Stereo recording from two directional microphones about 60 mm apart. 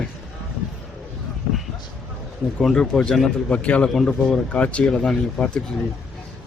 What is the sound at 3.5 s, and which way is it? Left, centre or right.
Speech, left.